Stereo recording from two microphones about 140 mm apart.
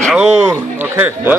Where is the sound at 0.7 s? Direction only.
15° right (ahead or behind).